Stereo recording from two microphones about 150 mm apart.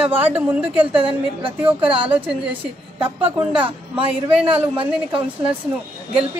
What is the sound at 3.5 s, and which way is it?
Speech, 35° right (ahead or behind).